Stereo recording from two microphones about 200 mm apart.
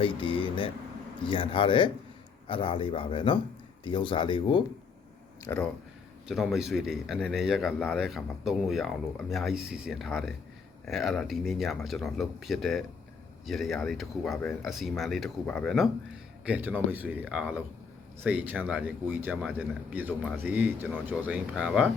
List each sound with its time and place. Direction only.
0.0 s speech: 25° left (ahead or behind)
6.2 s speech: centre (ahead or behind)